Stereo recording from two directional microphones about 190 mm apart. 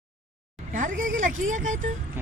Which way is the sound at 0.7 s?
45° right (ahead or behind).